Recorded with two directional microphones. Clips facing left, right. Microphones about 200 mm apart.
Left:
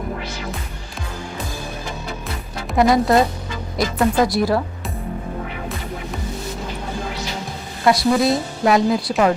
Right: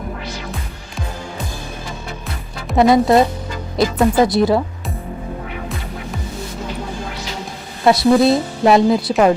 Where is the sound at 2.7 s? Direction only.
25° right (ahead or behind).